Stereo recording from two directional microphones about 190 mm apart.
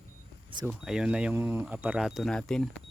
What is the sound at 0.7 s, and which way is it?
Speech, 5° right (ahead or behind).